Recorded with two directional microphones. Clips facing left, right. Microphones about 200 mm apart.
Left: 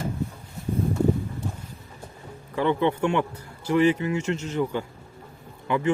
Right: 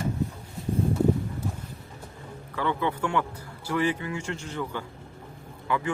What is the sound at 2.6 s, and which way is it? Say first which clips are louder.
Speech: left 5 dB; 20° left (ahead or behind).